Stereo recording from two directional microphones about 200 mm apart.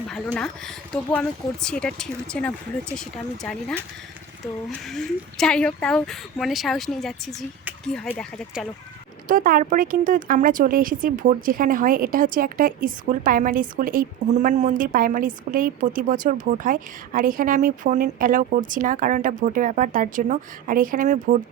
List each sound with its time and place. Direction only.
0.3 s speech: 5° left (ahead or behind)
9.2 s speech: 45° right (ahead or behind)